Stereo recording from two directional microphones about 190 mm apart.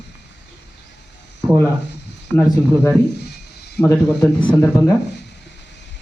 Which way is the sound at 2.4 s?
15° left (ahead or behind).